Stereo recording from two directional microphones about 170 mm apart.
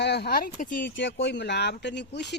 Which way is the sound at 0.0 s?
80° left.